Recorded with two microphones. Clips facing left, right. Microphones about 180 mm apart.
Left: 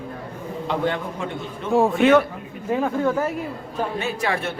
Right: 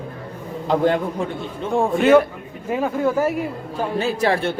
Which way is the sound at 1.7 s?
Centre (ahead or behind).